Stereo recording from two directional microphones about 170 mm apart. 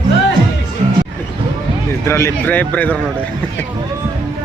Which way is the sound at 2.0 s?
15° left (ahead or behind).